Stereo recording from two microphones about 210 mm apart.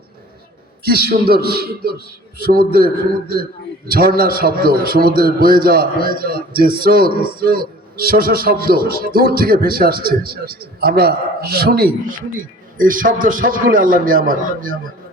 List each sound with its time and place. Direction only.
0.9 s a man's voice: 45° right (ahead or behind)